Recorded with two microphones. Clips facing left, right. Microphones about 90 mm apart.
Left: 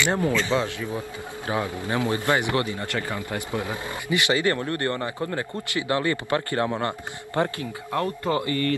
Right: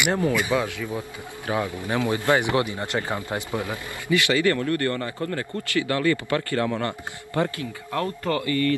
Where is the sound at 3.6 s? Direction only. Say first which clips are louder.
Right 1 dB; 20° left (ahead or behind).